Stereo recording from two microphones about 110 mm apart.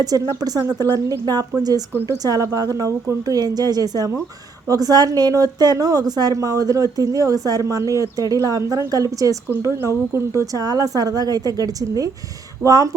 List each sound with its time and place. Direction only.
0.0 s a woman's voice: 35° right (ahead or behind)